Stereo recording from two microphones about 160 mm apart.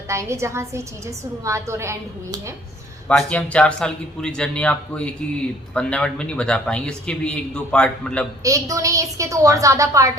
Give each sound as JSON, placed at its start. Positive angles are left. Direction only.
{"t": 0.1, "sound": "a woman's voice", "side_deg": -20}
{"t": 3.1, "sound": "speech", "side_deg": 5}
{"t": 8.4, "sound": "a woman's voice", "side_deg": -20}